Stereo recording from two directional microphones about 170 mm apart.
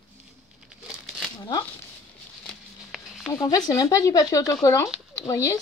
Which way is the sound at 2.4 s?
5° left (ahead or behind).